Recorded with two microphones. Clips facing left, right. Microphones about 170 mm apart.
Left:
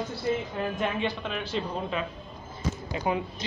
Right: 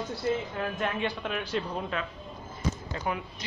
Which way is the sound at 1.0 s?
10° right (ahead or behind).